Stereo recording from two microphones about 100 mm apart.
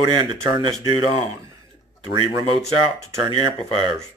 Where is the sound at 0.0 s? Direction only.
50° right (ahead or behind).